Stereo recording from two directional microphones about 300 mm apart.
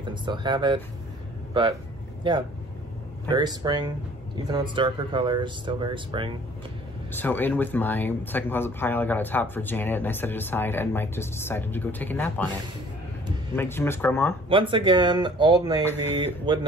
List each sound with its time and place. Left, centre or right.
0.0 s speech: centre
3.3 s speech: centre
7.1 s speech: centre
13.6 s speech: centre
14.5 s speech: centre